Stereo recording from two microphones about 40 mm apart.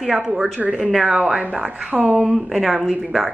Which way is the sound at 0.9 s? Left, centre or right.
Centre.